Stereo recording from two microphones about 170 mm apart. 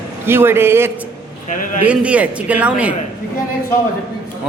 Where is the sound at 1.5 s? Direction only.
50° left (ahead or behind).